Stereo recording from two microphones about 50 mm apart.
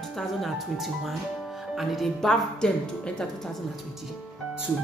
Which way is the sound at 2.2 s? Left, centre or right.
Centre.